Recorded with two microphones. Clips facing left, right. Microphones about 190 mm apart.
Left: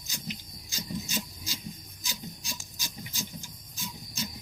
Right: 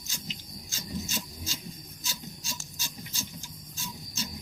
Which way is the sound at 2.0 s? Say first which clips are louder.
Left 2 dB; 15° left (ahead or behind).